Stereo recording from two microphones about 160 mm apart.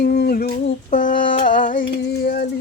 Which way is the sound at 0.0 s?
85° left.